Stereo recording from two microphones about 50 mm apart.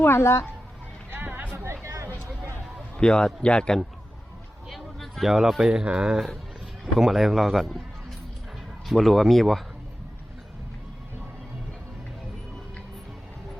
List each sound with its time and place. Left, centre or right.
0.0 s speech: left
1.1 s music: right
1.5 s a sound: right
3.0 s a man's voice: centre
4.7 s speech: centre
6.9 s speech: centre
8.9 s speech: centre